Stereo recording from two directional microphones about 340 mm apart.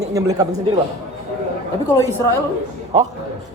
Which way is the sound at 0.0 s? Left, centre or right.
Centre.